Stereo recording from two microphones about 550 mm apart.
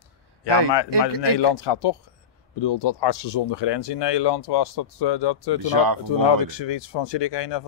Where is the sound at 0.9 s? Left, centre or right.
Right.